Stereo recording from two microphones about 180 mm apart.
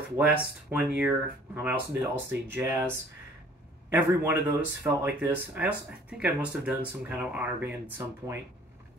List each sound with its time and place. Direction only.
0.2 s speech: 5° right (ahead or behind)
3.9 s speech: 10° right (ahead or behind)